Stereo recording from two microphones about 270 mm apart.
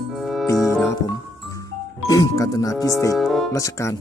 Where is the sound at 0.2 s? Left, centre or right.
Centre.